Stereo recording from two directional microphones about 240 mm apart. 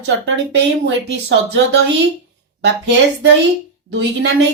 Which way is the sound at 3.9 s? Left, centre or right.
Right.